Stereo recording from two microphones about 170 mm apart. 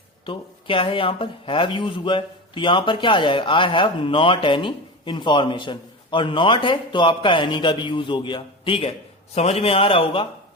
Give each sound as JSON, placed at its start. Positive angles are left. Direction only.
{"t": 0.3, "sound": "speech", "side_deg": 30}